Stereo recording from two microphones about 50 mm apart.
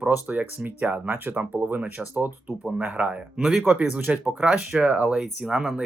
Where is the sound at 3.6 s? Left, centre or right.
Right.